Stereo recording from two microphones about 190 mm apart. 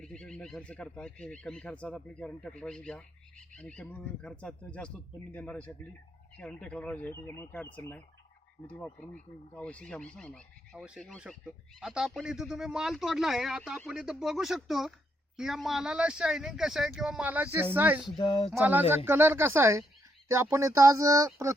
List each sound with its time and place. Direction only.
0.0 s speech: 5° left (ahead or behind)
18.2 s a sound: 25° left (ahead or behind)
18.5 s speech: 10° right (ahead or behind)